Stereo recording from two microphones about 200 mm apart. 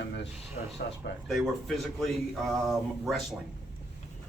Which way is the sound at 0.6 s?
45° left (ahead or behind).